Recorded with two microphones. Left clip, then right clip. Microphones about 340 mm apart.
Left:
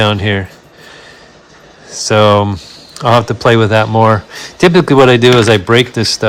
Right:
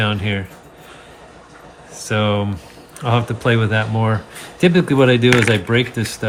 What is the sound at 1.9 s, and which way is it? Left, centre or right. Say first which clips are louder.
Speech: left 11 dB; centre.